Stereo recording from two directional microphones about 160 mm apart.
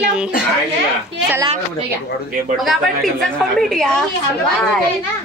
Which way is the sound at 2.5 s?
Centre (ahead or behind).